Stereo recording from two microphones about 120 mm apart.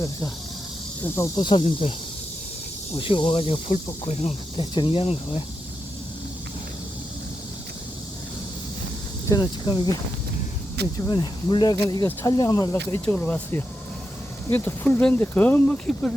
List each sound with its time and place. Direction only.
1.0 s speech: 20° left (ahead or behind)
1.4 s speech: 40° left (ahead or behind)
3.0 s speech: 45° left (ahead or behind)
4.1 s speech: 60° left (ahead or behind)
4.7 s speech: 45° left (ahead or behind)
9.3 s speech: 40° left (ahead or behind)
11.0 s speech: 35° left (ahead or behind)
12.7 s speech: 20° left (ahead or behind)